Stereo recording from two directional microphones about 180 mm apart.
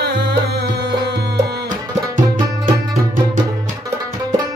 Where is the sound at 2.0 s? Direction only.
15° right (ahead or behind).